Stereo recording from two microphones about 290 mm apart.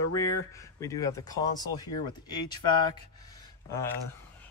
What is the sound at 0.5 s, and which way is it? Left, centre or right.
Speech, centre.